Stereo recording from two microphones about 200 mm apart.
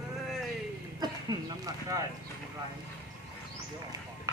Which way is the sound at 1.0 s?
20° right (ahead or behind).